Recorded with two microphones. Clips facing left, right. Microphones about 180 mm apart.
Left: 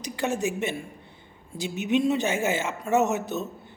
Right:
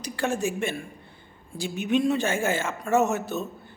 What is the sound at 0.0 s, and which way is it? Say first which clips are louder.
Speech: even; 20° left (ahead or behind).